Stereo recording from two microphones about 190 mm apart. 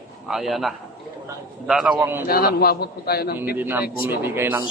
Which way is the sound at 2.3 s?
50° left (ahead or behind).